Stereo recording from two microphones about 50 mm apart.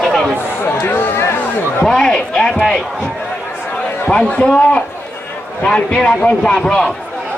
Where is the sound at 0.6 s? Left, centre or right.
Left.